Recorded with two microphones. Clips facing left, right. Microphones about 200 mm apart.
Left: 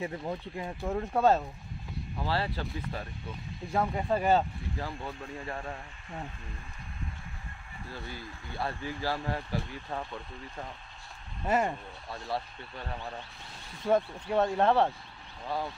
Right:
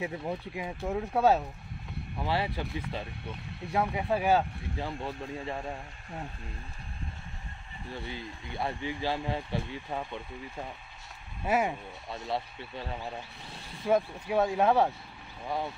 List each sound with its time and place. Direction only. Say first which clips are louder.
0.0 s speech: right 1 dB; 5° right (ahead or behind)
2.2 s speech: right 1 dB; 15° right (ahead or behind)
4.7 s speech: right 3 dB; 25° right (ahead or behind)
5.5 s speech: right 2 dB; 10° right (ahead or behind)
7.9 s speech: right 3 dB; 20° right (ahead or behind)
12.1 s speech: right 1 dB; 20° right (ahead or behind)
12.8 s speech: even; 10° right (ahead or behind)